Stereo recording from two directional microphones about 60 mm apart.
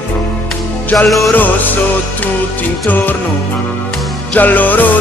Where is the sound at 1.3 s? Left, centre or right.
Left.